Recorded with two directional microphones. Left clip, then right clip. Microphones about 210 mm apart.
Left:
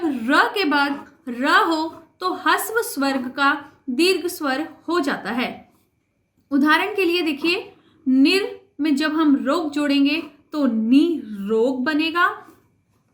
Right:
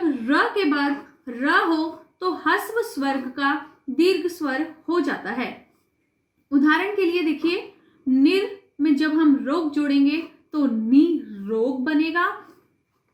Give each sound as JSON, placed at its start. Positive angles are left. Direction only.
{"t": 0.1, "sound": "a woman's voice", "side_deg": 45}
{"t": 6.5, "sound": "a woman's voice", "side_deg": 45}
{"t": 8.8, "sound": "a woman's voice", "side_deg": 45}